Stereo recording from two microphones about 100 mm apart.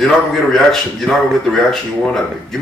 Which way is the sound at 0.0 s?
5° left (ahead or behind).